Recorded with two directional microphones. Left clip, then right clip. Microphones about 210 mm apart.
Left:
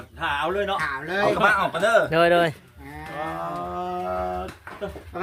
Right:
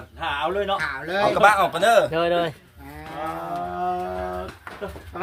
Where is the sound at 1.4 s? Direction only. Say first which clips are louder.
Right 6 dB; 55° right (ahead or behind).